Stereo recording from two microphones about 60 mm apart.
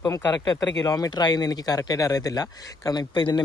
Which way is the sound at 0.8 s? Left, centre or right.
Left.